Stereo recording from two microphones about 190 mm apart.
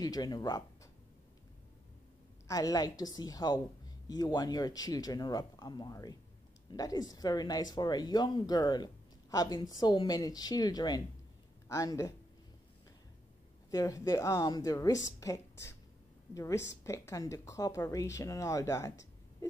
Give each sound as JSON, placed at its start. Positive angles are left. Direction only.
{"t": 0.0, "sound": "speech", "side_deg": 20}
{"t": 2.4, "sound": "speech", "side_deg": 20}
{"t": 13.7, "sound": "speech", "side_deg": 20}